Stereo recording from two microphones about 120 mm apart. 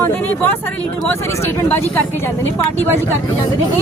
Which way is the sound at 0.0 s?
15° left (ahead or behind).